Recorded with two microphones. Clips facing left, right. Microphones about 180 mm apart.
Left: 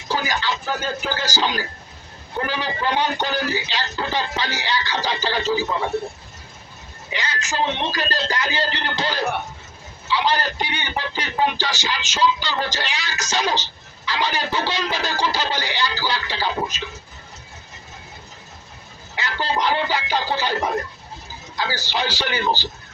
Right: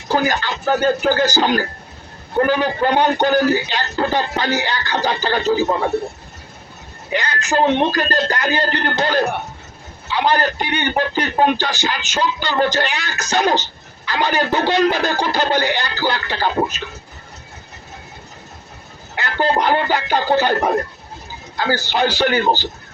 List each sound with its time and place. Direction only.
0.1 s speech: 55° right (ahead or behind)
7.1 s speech: 55° right (ahead or behind)
19.1 s speech: 55° right (ahead or behind)